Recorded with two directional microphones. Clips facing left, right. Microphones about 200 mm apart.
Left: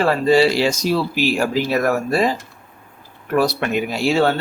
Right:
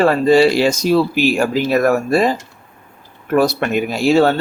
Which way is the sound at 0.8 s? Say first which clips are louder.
Right 5 dB; 50° right (ahead or behind).